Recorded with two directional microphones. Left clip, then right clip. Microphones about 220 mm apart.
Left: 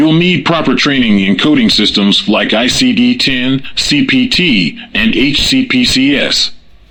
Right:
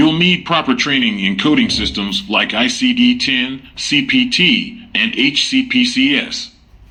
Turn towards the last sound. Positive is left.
turn(degrees=45)  # may be behind; listen again after turning